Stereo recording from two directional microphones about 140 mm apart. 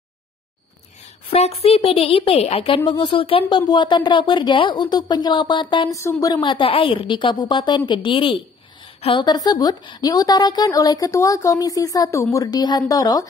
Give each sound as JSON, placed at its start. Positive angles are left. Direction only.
{"t": 1.3, "sound": "speech", "side_deg": 45}
{"t": 5.9, "sound": "a woman's voice", "side_deg": 20}
{"t": 6.3, "sound": "a woman's voice", "side_deg": 35}